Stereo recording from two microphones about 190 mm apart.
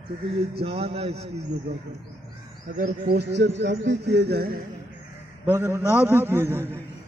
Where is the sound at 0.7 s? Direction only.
30° right (ahead or behind).